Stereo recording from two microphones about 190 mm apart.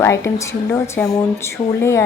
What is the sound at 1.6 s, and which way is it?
Speech, 25° left (ahead or behind).